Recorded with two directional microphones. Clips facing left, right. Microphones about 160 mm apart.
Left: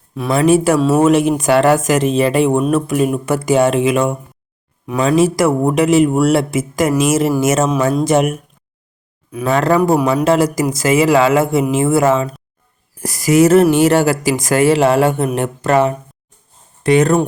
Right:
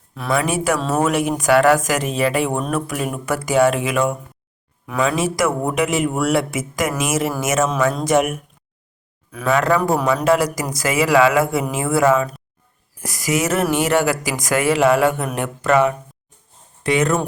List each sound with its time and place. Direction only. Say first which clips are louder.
0.3 s speech: left 7 dB; 35° left (ahead or behind)
4.9 s speech: left 6 dB; 35° left (ahead or behind)
9.5 s speech: left 4 dB; 30° left (ahead or behind)